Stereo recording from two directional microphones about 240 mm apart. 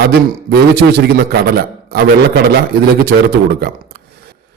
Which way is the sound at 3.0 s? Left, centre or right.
Right.